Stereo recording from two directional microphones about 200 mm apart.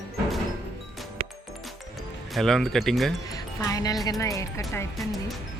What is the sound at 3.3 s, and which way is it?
Music, 15° left (ahead or behind).